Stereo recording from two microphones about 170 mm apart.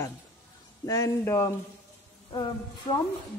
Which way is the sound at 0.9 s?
20° left (ahead or behind).